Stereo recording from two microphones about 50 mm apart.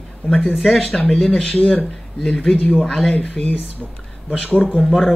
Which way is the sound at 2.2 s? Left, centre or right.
Centre.